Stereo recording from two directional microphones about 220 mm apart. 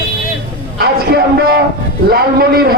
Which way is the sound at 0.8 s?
45° right (ahead or behind).